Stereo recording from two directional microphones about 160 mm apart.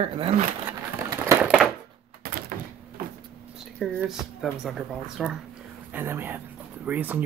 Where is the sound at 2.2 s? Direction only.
70° right (ahead or behind).